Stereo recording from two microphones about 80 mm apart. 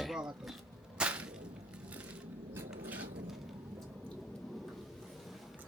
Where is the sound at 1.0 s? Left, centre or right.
Centre.